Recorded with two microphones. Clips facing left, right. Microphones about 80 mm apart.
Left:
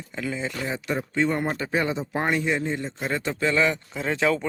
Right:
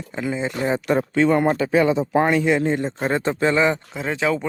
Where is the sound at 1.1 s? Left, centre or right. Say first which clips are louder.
Right 7 dB; right.